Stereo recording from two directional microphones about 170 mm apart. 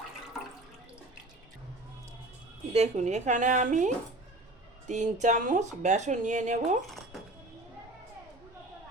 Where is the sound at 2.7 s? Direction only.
40° right (ahead or behind).